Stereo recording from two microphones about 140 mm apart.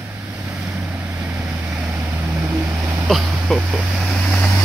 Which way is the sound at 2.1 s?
20° right (ahead or behind).